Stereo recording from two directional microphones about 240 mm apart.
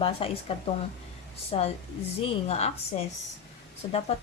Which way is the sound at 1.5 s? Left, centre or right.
Left.